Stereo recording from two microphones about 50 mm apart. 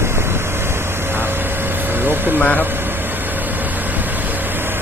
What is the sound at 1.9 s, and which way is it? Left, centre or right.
Vehicle, right.